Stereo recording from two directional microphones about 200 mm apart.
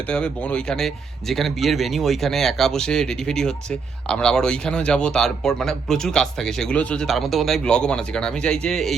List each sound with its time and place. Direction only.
0.1 s speech: 5° left (ahead or behind)